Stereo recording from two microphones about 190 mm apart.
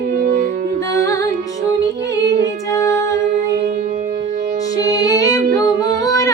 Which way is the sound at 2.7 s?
15° left (ahead or behind).